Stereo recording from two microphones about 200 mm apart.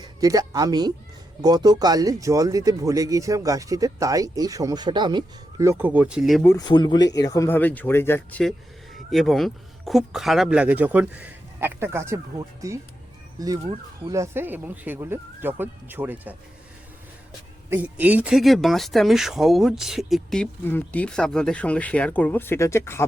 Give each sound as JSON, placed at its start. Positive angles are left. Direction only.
{"t": 0.0, "sound": "speech", "side_deg": -20}
{"t": 6.5, "sound": "speech", "side_deg": 20}
{"t": 17.7, "sound": "speech", "side_deg": -10}